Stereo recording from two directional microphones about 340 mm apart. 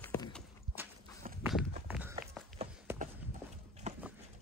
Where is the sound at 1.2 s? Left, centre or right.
Right.